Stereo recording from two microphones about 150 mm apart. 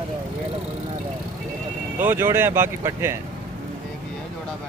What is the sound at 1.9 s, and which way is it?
Speech, 15° right (ahead or behind).